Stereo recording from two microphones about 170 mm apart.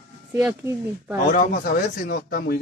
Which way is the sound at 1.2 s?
60° left (ahead or behind).